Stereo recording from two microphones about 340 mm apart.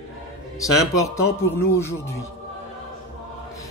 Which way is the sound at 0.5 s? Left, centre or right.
Centre.